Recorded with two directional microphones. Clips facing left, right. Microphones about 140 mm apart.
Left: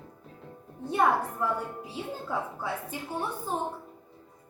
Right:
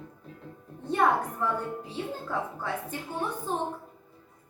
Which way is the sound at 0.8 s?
10° left (ahead or behind).